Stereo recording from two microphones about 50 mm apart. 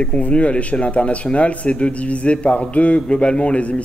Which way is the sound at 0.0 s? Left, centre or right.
Left.